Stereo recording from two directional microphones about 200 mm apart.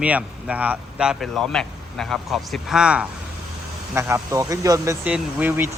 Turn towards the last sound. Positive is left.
turn(degrees=-10)  # may be behind; listen again after turning